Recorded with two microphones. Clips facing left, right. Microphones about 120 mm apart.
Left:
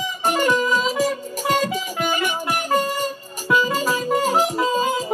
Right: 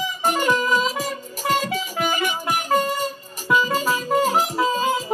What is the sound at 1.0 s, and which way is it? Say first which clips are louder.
Music: left 6 dB; 15° left (ahead or behind).